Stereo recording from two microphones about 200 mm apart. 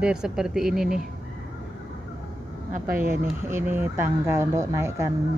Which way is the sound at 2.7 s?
45° right (ahead or behind).